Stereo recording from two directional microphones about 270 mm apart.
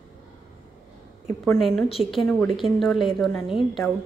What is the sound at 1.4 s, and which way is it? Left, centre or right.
A woman's voice, centre.